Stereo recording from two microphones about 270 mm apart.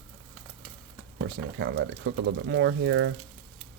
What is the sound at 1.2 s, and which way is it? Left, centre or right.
Speech, right.